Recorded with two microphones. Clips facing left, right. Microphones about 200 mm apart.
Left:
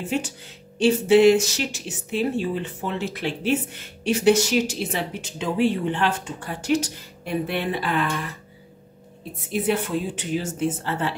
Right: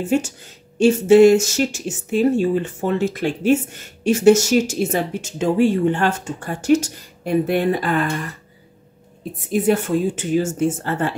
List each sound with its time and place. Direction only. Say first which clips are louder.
0.0 s speech: right 7 dB; 45° right (ahead or behind)
9.5 s speech: right 6 dB; 45° right (ahead or behind)